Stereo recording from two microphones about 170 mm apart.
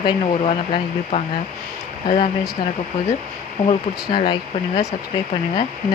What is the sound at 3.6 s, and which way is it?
Speech, 35° left (ahead or behind).